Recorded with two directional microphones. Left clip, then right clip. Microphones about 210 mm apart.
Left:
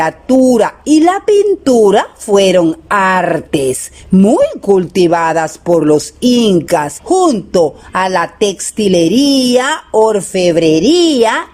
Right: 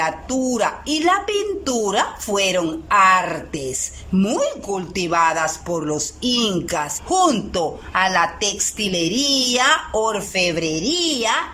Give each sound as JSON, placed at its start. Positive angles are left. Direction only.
{"t": 0.0, "sound": "speech", "side_deg": 35}